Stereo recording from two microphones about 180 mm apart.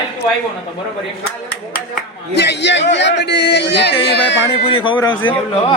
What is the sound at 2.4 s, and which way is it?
Speech, 75° left (ahead or behind).